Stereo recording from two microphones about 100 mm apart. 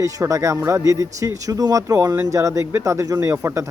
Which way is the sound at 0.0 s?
35° right (ahead or behind).